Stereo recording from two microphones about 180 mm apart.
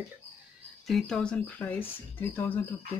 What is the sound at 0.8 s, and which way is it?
Speech, centre (ahead or behind).